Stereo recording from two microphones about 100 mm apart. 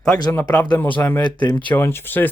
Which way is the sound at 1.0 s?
20° left (ahead or behind).